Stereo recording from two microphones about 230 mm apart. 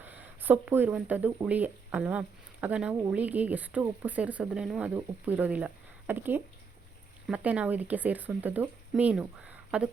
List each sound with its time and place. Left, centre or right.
0.0 s speech: centre